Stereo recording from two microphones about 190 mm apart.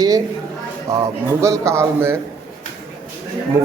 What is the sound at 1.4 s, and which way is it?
Speech, 15° right (ahead or behind).